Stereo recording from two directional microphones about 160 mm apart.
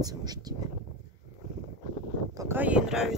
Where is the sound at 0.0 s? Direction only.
25° right (ahead or behind).